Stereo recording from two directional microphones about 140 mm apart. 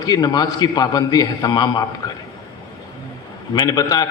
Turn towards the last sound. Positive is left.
turn(degrees=25)  # may be behind; listen again after turning